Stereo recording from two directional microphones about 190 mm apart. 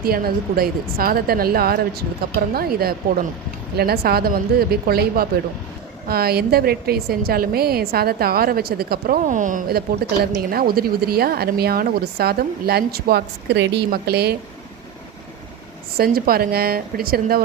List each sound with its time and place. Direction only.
0.0 s a woman's voice: 50° right (ahead or behind)
16.0 s a woman's voice: 50° right (ahead or behind)